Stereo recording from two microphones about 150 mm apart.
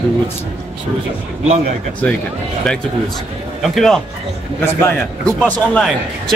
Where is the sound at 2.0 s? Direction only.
10° left (ahead or behind).